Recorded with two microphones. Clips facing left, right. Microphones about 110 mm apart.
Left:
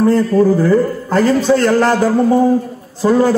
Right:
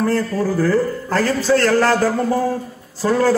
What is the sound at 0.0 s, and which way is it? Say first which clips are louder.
A man's voice: left 7 dB; 20° left (ahead or behind).